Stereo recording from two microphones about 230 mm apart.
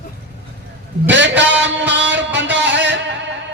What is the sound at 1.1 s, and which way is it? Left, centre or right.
A man's voice, right.